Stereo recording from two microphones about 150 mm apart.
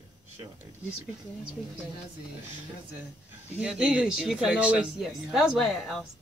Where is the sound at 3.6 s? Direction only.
5° right (ahead or behind).